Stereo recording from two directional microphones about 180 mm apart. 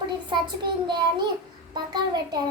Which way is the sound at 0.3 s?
25° right (ahead or behind).